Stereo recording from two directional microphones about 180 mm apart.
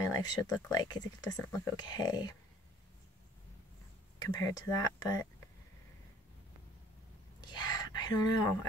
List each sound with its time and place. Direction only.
0.0 s a sound: 20° left (ahead or behind)
0.7 s speech: 20° left (ahead or behind)
4.2 s speech: 20° left (ahead or behind)
7.3 s speech: 20° left (ahead or behind)